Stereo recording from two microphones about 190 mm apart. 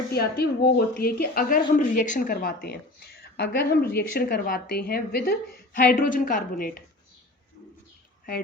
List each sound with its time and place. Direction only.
0.1 s speech: 55° left (ahead or behind)